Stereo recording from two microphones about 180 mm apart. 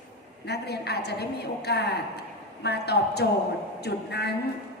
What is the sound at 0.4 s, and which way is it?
A woman's voice, 65° left (ahead or behind).